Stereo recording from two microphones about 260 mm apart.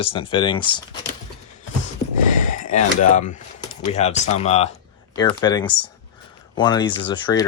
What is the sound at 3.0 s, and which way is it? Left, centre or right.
Speech, left.